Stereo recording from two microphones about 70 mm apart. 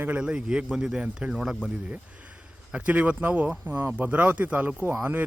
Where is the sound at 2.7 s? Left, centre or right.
Right.